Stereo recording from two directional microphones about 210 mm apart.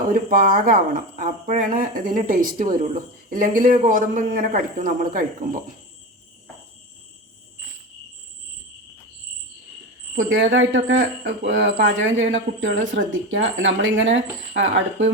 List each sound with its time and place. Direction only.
0.1 s speech: 40° right (ahead or behind)
10.2 s speech: 65° right (ahead or behind)